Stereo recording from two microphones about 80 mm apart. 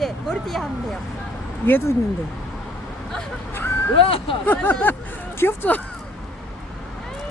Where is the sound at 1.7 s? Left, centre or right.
Left.